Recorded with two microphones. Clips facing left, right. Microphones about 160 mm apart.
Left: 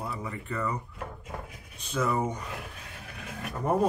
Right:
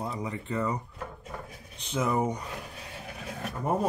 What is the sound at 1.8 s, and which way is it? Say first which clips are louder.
Speech: right 1 dB; 20° right (ahead or behind).